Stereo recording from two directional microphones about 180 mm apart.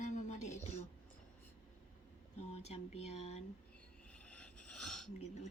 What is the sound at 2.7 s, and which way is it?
Speech, 35° left (ahead or behind).